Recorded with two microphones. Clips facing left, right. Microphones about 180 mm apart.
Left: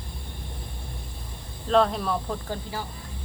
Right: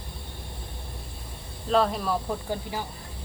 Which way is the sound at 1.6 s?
5° right (ahead or behind).